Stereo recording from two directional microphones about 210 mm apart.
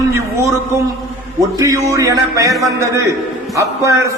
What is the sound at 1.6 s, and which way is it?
A man's voice, 15° right (ahead or behind).